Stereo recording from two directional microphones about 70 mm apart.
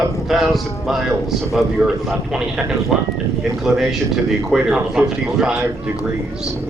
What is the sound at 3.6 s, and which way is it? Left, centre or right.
A man's voice, centre.